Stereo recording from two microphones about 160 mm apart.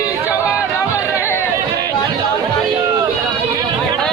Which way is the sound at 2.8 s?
15° right (ahead or behind).